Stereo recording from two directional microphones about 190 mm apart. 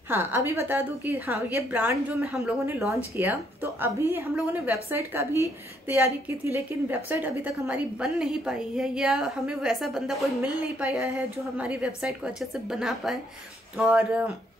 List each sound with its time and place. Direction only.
0.1 s a woman's voice: 10° right (ahead or behind)